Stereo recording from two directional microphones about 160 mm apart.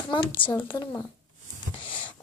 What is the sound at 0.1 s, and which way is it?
Speech, 30° left (ahead or behind).